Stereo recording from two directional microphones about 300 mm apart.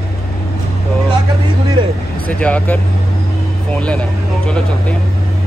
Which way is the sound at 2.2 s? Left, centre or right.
Centre.